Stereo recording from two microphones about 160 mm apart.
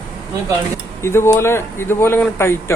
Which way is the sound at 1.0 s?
15° left (ahead or behind).